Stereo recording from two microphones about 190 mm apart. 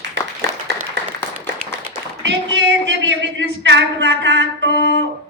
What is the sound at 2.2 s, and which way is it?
A woman's voice, 70° right (ahead or behind).